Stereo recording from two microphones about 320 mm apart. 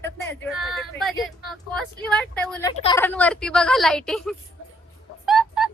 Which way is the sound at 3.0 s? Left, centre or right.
Centre.